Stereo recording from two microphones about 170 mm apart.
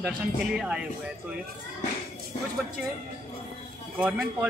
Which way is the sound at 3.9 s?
5° right (ahead or behind).